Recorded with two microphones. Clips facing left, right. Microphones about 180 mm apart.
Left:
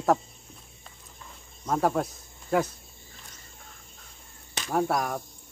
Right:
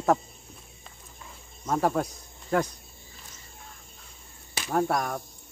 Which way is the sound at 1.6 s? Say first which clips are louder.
Even; centre (ahead or behind).